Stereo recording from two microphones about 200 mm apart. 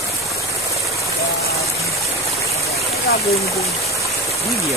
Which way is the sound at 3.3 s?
15° left (ahead or behind).